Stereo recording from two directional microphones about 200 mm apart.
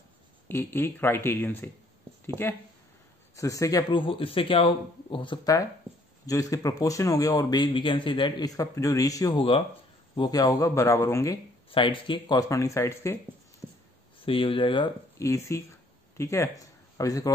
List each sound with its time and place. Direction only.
0.5 s a man's voice: 10° left (ahead or behind)
11.7 s speech: 25° left (ahead or behind)
14.2 s a man's voice: 25° left (ahead or behind)